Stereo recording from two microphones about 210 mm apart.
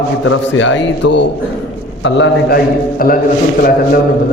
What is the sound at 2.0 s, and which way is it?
A man's voice, 55° left (ahead or behind).